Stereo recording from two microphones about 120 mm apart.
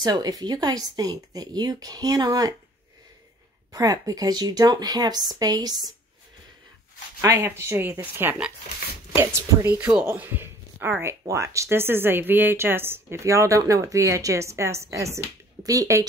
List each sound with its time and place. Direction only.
0.0 s speech: 35° right (ahead or behind)
3.7 s speech: 30° right (ahead or behind)
7.2 s speech: 20° right (ahead or behind)
9.8 s speech: 10° right (ahead or behind); by 16.1 s 30° right (ahead or behind)